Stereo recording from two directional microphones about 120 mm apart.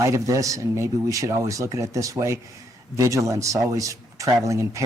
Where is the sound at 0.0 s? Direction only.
25° right (ahead or behind).